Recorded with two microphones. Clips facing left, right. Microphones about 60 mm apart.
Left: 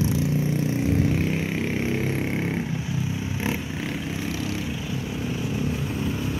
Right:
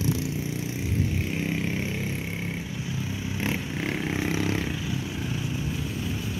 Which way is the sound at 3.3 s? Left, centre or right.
Centre.